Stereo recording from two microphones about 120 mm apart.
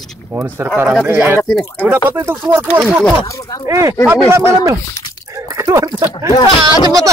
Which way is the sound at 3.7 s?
30° right (ahead or behind).